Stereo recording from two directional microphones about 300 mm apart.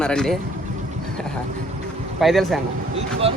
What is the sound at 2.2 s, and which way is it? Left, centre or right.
Speech, centre.